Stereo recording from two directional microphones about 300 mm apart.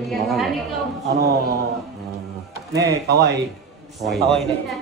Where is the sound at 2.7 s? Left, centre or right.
Centre.